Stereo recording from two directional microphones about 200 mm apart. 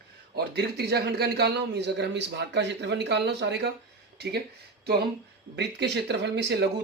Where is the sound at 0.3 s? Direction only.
55° right (ahead or behind).